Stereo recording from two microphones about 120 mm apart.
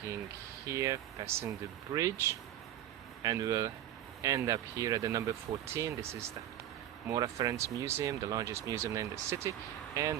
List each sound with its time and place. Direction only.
0.7 s speech: 25° right (ahead or behind)